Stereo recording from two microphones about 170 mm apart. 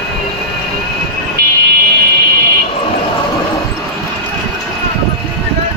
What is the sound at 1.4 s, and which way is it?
Vehicle, 60° right (ahead or behind).